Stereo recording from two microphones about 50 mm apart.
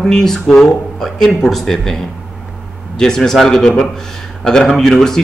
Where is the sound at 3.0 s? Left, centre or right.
Centre.